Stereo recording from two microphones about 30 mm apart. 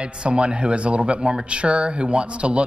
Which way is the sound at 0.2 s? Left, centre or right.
Right.